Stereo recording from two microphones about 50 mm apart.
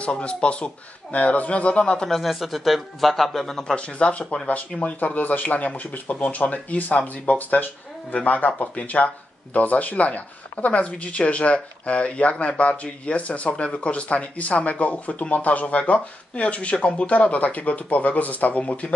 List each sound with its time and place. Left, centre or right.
0.0 s speech: left
2.0 s speech: centre
3.7 s speech: left
4.8 s speech: left